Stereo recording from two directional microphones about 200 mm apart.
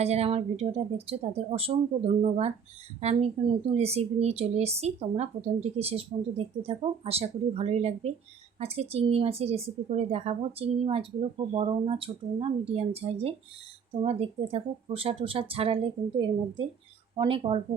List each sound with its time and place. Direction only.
0.0 s speech: 30° right (ahead or behind)
3.0 s speech: 30° right (ahead or behind)